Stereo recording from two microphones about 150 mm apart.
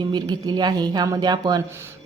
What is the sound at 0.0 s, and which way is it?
A woman's voice, 30° right (ahead or behind).